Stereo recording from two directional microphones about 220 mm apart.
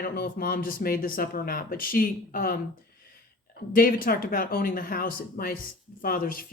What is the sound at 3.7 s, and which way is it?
A woman's voice, 40° left (ahead or behind).